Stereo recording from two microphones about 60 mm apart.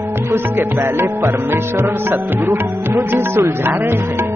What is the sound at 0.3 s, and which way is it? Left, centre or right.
Music, right.